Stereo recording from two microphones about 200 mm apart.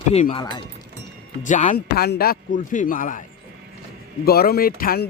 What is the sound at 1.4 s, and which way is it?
Speech, 40° left (ahead or behind).